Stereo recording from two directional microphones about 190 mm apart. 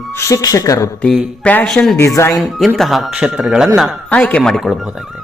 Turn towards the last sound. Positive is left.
turn(degrees=0)  # may be behind; listen again after turning